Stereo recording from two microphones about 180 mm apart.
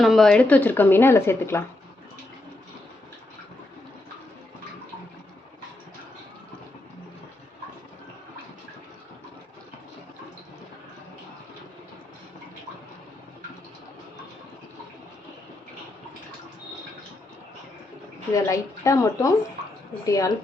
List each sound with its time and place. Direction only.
0.0 s speech: centre (ahead or behind)
18.3 s speech: 15° left (ahead or behind)